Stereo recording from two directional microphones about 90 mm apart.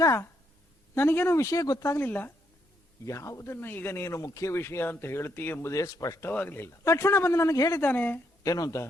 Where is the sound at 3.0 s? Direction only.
35° left (ahead or behind).